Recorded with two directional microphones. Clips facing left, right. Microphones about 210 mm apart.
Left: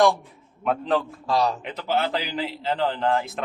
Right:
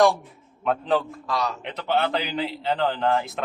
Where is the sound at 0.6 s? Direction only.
Centre (ahead or behind).